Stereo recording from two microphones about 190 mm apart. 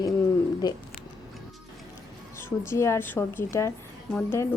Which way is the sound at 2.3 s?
15° left (ahead or behind).